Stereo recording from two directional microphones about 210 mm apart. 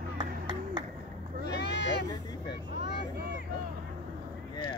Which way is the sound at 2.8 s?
50° left (ahead or behind).